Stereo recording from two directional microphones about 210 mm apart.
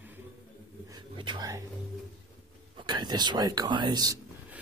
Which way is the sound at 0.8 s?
20° right (ahead or behind).